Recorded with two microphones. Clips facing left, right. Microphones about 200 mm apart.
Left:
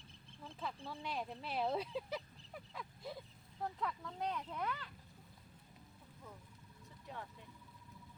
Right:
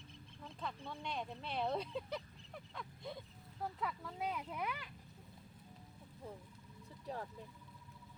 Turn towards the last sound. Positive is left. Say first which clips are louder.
# right 5 dB
turn(degrees=-35)  # may be behind; listen again after turning